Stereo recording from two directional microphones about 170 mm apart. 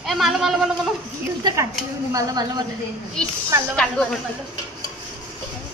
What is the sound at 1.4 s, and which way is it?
A woman's voice, 20° right (ahead or behind).